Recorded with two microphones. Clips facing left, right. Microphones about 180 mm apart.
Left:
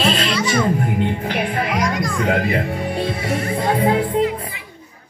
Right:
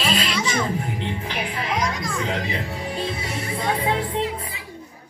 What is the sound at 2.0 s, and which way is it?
Children playing, 60° left (ahead or behind).